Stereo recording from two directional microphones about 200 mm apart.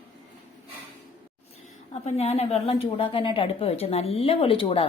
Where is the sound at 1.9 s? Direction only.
35° left (ahead or behind).